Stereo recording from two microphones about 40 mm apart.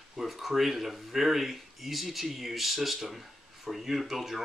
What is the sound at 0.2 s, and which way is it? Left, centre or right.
Speech, centre.